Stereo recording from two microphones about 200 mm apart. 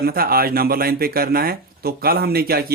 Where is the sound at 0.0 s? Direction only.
50° right (ahead or behind).